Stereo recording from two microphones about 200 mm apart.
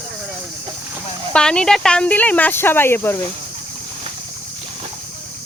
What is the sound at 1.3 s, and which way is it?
Speech, 5° left (ahead or behind).